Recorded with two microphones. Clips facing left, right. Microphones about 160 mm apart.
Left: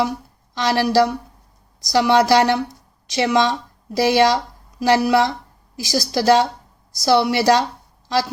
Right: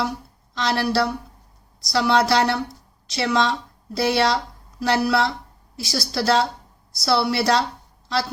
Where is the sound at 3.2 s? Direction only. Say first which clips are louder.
Left 4 dB; 15° left (ahead or behind).